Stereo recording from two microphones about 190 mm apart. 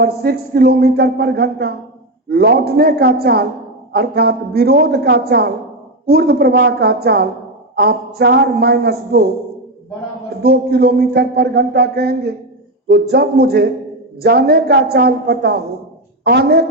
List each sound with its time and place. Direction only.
0.0 s speech: 55° right (ahead or behind)
10.4 s speech: 55° right (ahead or behind)